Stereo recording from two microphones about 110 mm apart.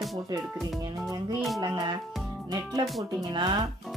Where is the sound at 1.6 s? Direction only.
40° right (ahead or behind).